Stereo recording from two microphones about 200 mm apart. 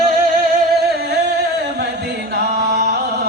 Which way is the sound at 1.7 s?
55° right (ahead or behind).